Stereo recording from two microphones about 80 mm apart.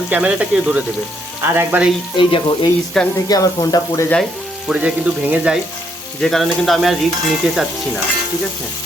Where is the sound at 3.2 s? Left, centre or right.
Left.